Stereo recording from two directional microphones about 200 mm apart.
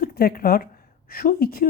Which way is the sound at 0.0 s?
50° left (ahead or behind).